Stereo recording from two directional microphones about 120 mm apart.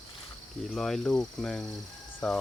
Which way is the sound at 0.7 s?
5° left (ahead or behind).